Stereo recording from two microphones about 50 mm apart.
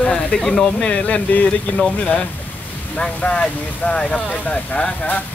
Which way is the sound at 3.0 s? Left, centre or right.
Left.